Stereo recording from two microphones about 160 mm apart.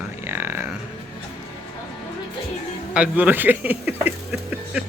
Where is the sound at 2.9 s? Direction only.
10° right (ahead or behind).